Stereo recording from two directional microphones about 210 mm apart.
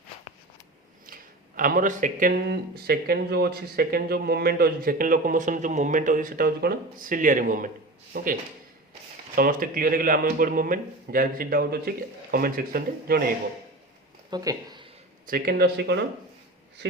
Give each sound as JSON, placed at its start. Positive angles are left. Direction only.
{"t": 1.0, "sound": "a man's voice", "side_deg": -40}
{"t": 14.3, "sound": "speech", "side_deg": -20}
{"t": 15.3, "sound": "a man's voice", "side_deg": -45}